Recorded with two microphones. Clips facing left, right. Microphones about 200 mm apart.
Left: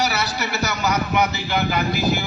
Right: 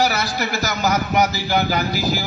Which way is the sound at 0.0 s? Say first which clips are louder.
Right 3 dB; 50° right (ahead or behind).